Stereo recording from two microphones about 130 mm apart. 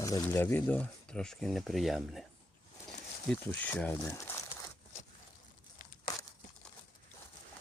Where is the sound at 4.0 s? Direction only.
20° left (ahead or behind).